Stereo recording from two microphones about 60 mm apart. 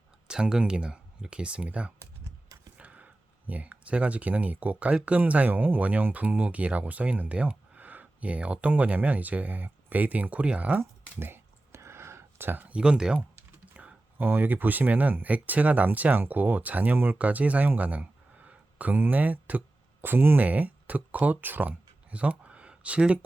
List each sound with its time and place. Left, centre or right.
0.3 s speech: centre
11.2 s a sound: right
12.7 s speech: centre
13.7 s computer keyboard: right
14.3 s speech: right